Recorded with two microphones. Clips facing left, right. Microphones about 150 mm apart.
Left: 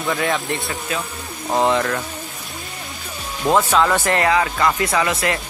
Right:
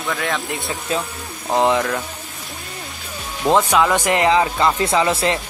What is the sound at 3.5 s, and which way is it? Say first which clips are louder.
Speech: right 1 dB; 15° right (ahead or behind).